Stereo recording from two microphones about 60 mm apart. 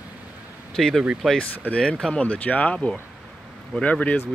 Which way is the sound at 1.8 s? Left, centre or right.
Centre.